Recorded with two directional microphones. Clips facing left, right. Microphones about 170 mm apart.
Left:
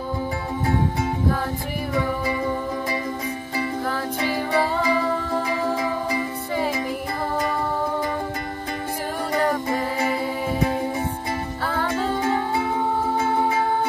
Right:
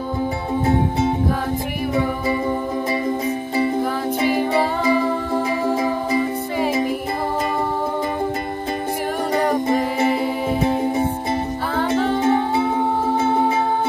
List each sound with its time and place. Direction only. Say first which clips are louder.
4.2 s music: right 4 dB; 20° right (ahead or behind)
6.6 s music: right 6 dB; 25° right (ahead or behind)
9.3 s music: right 4 dB; 20° right (ahead or behind)